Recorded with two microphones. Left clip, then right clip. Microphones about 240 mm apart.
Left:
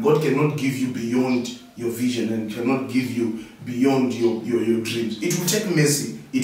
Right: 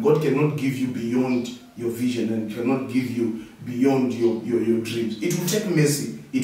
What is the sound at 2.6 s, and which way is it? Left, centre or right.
A man's voice, centre.